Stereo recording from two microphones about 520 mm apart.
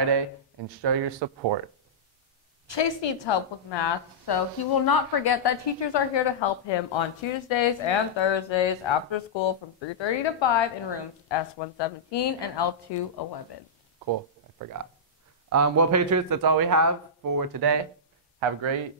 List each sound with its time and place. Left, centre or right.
0.8 s speech: right
2.7 s a woman's voice: left
15.5 s a man's voice: right
18.4 s speech: right